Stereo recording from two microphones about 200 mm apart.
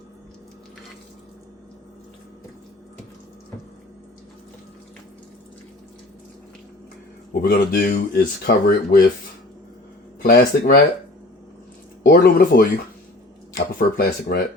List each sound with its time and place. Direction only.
7.4 s speech: 40° left (ahead or behind)
10.2 s speech: 50° left (ahead or behind)
12.0 s speech: 45° left (ahead or behind)